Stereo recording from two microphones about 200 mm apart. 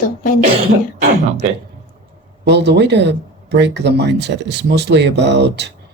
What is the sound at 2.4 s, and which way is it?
Speech, 60° right (ahead or behind).